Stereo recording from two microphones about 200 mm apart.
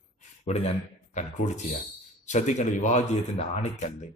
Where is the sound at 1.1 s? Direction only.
35° left (ahead or behind).